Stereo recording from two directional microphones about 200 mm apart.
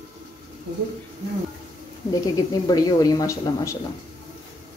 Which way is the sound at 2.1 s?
20° left (ahead or behind).